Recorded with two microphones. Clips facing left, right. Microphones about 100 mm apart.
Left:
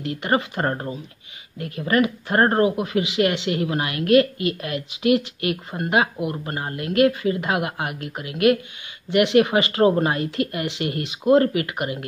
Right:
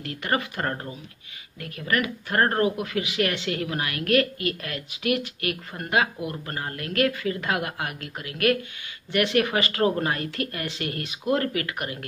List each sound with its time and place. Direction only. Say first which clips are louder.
0.0 s speech: left 5 dB; 25° left (ahead or behind)